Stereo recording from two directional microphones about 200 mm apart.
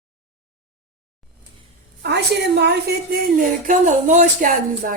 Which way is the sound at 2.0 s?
55° right (ahead or behind).